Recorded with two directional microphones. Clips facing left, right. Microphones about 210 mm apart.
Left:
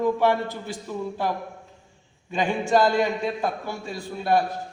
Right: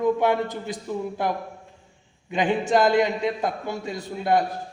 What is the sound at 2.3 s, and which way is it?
A man's voice, 20° right (ahead or behind).